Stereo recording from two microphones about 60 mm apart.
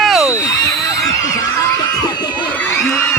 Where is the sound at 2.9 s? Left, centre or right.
Left.